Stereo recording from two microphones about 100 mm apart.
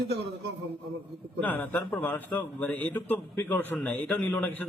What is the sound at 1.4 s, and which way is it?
Speech, 20° left (ahead or behind).